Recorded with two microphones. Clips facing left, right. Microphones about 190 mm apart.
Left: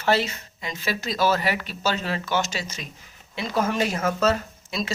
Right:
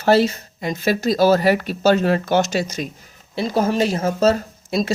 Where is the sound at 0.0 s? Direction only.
40° right (ahead or behind).